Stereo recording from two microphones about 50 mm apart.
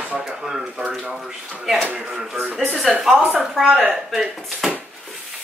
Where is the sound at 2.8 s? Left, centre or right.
Centre.